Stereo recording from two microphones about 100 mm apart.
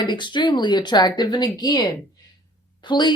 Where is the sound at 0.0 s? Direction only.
50° left (ahead or behind).